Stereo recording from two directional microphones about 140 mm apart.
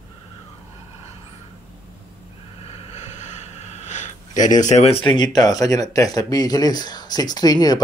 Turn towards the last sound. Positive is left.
turn(degrees=30)  # may be behind; listen again after turning